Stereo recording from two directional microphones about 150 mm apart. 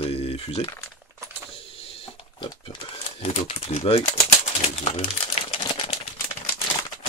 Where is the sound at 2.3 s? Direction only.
35° left (ahead or behind).